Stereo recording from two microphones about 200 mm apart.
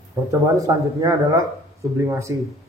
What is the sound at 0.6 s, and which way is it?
A man's voice, 15° right (ahead or behind).